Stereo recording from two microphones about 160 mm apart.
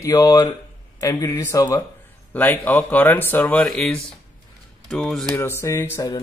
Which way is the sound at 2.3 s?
10° left (ahead or behind).